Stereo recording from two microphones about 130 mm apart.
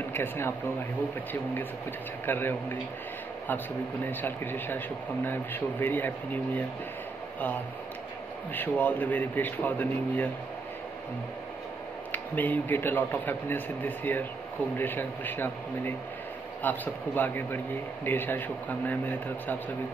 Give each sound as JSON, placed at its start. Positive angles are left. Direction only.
{"t": 0.1, "sound": "speech", "side_deg": 15}
{"t": 8.5, "sound": "speech", "side_deg": 15}
{"t": 12.1, "sound": "speech", "side_deg": 15}